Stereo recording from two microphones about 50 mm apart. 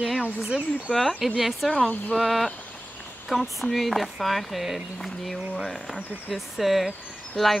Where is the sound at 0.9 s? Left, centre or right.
Centre.